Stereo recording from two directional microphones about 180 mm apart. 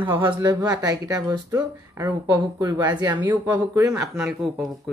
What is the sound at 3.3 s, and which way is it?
Speech, 10° right (ahead or behind).